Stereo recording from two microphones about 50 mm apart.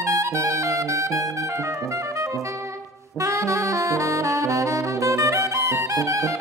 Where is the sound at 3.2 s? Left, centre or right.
Right.